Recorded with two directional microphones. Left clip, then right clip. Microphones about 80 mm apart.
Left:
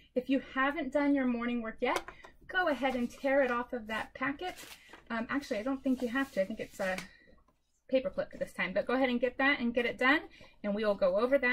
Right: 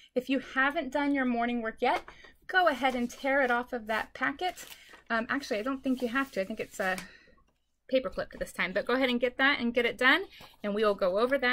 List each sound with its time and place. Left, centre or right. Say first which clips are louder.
0.1 s a woman's voice: right 2 dB; centre
3.0 s a woman's voice: right 1 dB; centre; by 11.3 s right